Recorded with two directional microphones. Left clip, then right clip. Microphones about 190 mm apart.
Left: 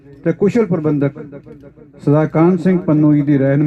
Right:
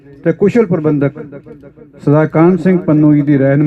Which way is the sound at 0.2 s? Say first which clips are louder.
Right 4 dB; 50° right (ahead or behind).